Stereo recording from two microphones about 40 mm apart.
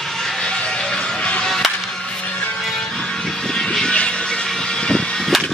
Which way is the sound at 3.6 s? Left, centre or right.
Centre.